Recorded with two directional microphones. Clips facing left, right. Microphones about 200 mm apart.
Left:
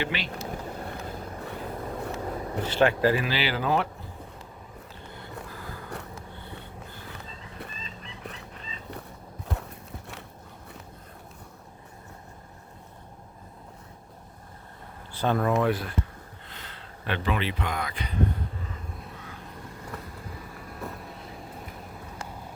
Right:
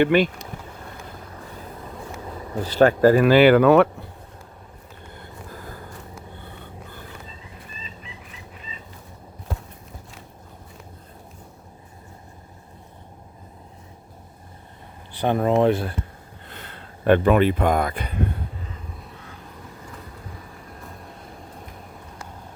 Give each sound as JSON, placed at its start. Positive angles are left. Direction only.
{"t": 0.0, "sound": "speech", "side_deg": -50}
{"t": 2.6, "sound": "speech", "side_deg": -40}
{"t": 5.5, "sound": "vehicle", "side_deg": -45}
{"t": 8.0, "sound": "fowl", "side_deg": -5}
{"t": 15.1, "sound": "speech", "side_deg": -15}
{"t": 16.5, "sound": "speech", "side_deg": -50}